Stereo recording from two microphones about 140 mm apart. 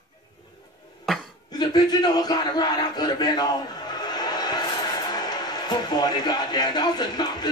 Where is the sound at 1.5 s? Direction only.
30° left (ahead or behind).